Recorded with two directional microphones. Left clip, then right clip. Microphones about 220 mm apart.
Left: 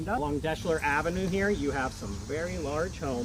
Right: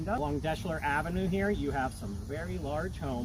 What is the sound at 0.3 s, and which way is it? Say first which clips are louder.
Speech: left 4 dB; 35° right (ahead or behind).